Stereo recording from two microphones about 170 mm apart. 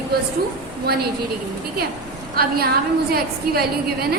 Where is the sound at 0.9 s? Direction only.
70° right (ahead or behind).